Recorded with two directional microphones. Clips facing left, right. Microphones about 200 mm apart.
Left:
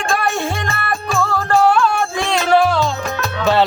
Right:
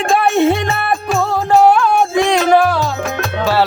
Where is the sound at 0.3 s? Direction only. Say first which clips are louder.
Right 9 dB; 20° right (ahead or behind).